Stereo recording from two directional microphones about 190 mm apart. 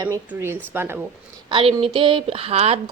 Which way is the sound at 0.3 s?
10° right (ahead or behind).